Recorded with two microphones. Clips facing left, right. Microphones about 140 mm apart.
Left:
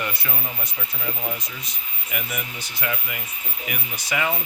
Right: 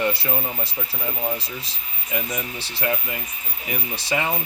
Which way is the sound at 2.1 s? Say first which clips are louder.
Right 4 dB; 30° right (ahead or behind).